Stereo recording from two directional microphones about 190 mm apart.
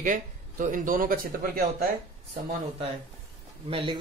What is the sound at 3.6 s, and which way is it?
Speech, 30° right (ahead or behind).